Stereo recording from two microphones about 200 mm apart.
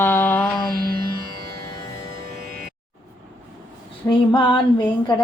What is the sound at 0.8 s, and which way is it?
Music, 50° right (ahead or behind).